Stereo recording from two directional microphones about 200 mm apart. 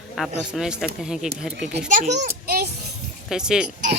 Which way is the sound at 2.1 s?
50° right (ahead or behind).